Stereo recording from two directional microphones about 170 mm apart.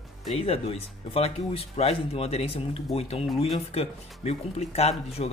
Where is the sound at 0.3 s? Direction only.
35° left (ahead or behind).